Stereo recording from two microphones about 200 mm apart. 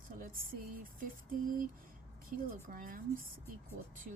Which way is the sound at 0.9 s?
45° right (ahead or behind).